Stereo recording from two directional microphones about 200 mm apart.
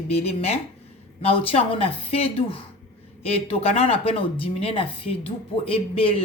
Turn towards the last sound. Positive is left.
turn(degrees=30)  # may be behind; listen again after turning